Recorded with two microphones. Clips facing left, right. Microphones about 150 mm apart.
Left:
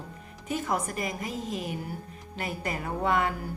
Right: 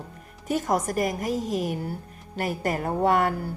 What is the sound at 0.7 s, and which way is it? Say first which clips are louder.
A woman's voice: right 7 dB; 45° right (ahead or behind).